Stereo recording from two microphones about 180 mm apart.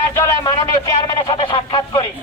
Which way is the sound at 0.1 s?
15° left (ahead or behind).